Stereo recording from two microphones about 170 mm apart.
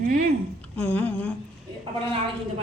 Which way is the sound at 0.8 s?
10° left (ahead or behind).